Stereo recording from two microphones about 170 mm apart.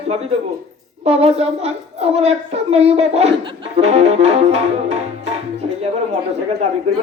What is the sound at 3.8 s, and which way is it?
Music, 40° right (ahead or behind).